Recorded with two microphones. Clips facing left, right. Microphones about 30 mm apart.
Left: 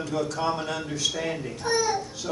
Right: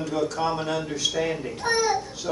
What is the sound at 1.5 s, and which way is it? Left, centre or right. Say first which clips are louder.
Speech: right 1 dB; right.